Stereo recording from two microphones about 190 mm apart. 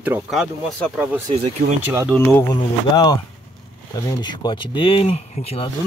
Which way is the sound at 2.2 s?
10° left (ahead or behind).